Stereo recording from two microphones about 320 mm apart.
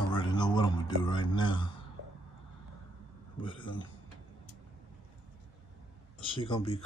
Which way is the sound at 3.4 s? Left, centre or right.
Centre.